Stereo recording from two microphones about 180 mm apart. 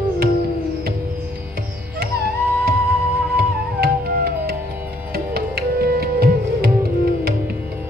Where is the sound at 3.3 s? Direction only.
60° right (ahead or behind).